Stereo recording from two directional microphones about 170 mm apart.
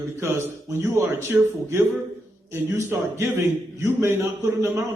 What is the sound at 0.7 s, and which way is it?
A man's voice, 15° right (ahead or behind).